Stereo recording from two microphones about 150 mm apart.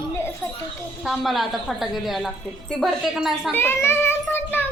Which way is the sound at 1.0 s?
Centre (ahead or behind).